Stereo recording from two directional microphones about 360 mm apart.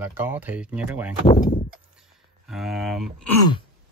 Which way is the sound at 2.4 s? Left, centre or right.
Centre.